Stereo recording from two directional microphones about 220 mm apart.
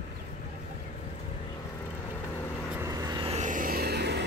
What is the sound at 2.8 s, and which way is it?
Vehicle, 15° right (ahead or behind).